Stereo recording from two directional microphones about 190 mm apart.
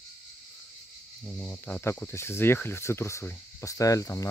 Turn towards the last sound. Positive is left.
turn(degrees=15)  # may be behind; listen again after turning